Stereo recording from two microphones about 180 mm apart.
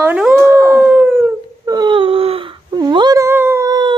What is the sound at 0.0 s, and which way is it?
Speech, 10° right (ahead or behind).